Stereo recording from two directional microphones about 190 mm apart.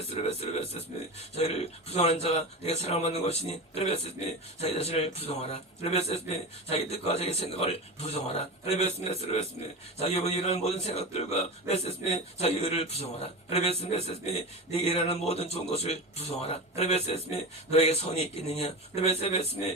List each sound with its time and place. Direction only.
0.3 s a man's voice: 35° left (ahead or behind)
10.0 s a man's voice: 35° left (ahead or behind)